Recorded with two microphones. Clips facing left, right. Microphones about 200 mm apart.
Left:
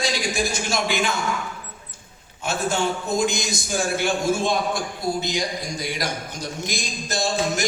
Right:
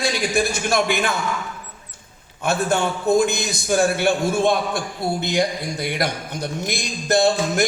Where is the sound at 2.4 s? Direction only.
60° right (ahead or behind).